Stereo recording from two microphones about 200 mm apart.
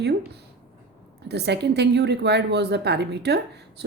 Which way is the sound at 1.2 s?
55° right (ahead or behind).